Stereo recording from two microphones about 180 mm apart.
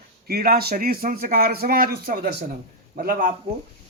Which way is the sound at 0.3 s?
55° right (ahead or behind).